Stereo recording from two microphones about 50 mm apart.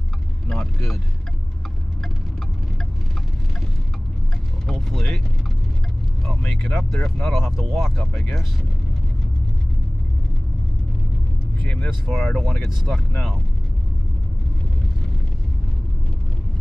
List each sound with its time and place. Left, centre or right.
0.5 s speech: centre
4.6 s speech: centre
6.6 s speech: centre
7.3 s speech: centre
8.0 s speech: centre
11.6 s speech: left
12.1 s speech: centre